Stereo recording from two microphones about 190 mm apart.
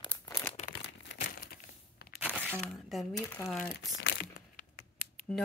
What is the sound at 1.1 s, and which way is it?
Crumpling, 60° left (ahead or behind).